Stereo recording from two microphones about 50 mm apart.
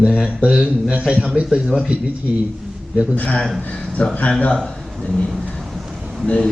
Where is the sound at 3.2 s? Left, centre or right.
Left.